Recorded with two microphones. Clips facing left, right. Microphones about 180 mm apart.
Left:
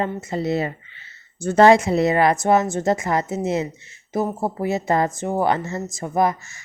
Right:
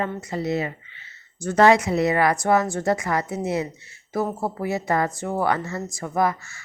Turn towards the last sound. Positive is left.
turn(degrees=20)  # may be behind; listen again after turning